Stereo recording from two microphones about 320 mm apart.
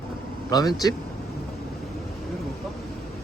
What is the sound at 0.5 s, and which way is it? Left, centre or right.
Speech, centre.